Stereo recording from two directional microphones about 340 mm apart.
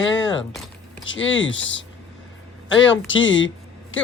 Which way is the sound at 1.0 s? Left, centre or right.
Left.